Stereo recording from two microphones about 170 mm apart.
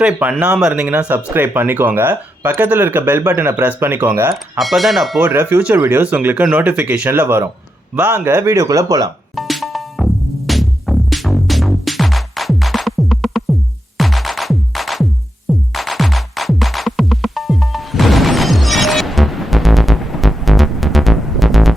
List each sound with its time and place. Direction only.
0.0 s speech: 10° right (ahead or behind)
4.5 s speech: centre (ahead or behind); by 9.0 s 20° right (ahead or behind)
9.3 s music: centre (ahead or behind)